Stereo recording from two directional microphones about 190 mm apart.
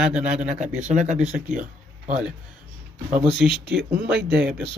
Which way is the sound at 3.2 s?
Centre (ahead or behind).